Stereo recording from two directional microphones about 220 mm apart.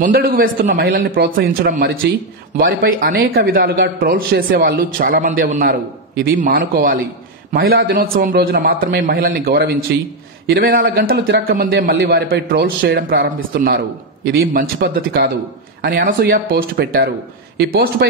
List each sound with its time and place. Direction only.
0.0 s a man's voice: 40° right (ahead or behind)
11.9 s a man's voice: 50° right (ahead or behind)